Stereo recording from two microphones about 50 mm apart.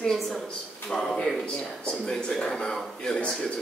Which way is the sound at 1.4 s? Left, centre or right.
Left.